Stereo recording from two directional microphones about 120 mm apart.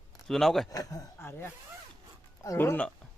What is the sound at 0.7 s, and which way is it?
Speech, 30° left (ahead or behind).